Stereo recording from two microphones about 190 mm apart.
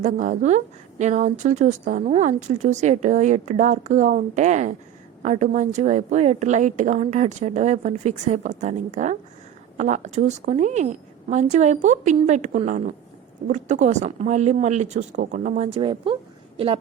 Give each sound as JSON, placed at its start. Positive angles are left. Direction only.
{"t": 0.0, "sound": "a woman's voice", "side_deg": -40}